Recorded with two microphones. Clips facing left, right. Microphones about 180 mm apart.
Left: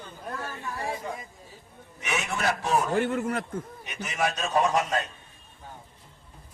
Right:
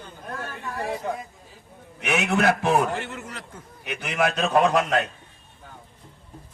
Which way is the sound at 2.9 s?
50° left (ahead or behind).